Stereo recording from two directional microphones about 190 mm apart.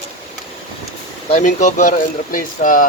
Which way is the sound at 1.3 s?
40° left (ahead or behind).